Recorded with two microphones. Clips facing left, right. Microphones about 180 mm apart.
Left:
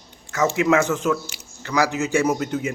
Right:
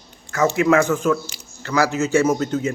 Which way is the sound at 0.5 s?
20° left (ahead or behind).